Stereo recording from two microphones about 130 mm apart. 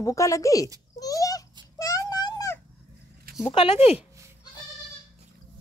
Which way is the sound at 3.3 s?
90° right.